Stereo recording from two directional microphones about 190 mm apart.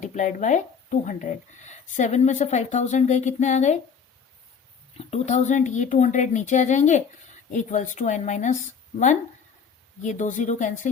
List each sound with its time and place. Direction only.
0.0 s speech: 40° left (ahead or behind)
4.9 s speech: 35° left (ahead or behind)
10.0 s speech: 40° left (ahead or behind)